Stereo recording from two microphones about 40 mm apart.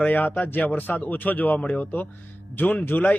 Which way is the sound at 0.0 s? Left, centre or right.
Left.